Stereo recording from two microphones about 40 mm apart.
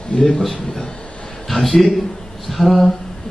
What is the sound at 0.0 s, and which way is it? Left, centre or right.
Speech, left.